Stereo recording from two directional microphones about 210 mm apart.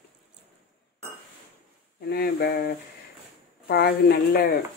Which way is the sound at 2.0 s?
50° left (ahead or behind).